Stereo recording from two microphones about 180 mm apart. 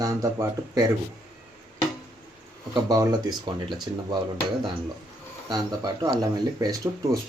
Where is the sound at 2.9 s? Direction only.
20° right (ahead or behind).